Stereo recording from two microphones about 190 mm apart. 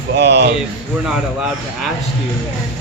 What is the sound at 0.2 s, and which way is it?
Speech, 60° right (ahead or behind).